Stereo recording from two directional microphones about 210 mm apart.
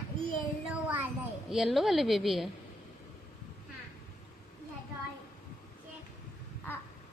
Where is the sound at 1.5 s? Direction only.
Centre (ahead or behind).